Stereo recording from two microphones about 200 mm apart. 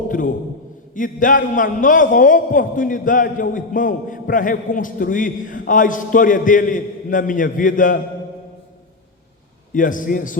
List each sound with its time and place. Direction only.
0.1 s a man's voice: 40° left (ahead or behind)
9.7 s a man's voice: 40° left (ahead or behind)